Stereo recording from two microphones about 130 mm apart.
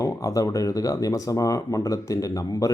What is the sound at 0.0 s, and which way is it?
Speech, 25° left (ahead or behind).